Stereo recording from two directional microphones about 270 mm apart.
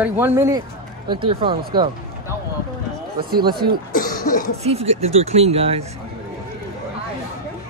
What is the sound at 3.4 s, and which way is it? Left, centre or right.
Speech, centre.